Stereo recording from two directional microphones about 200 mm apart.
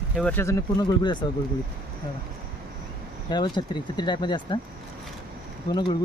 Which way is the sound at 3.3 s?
20° left (ahead or behind).